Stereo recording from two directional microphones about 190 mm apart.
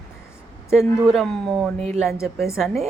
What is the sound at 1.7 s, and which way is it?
Speech, 35° right (ahead or behind).